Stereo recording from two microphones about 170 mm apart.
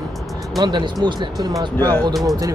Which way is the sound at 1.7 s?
10° left (ahead or behind).